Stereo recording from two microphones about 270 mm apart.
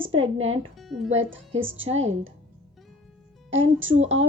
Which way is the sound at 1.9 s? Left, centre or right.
Right.